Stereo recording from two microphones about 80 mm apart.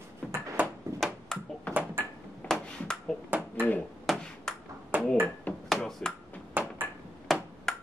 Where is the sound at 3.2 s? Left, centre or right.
Right.